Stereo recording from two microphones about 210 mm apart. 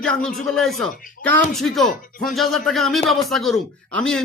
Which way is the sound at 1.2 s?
40° left (ahead or behind).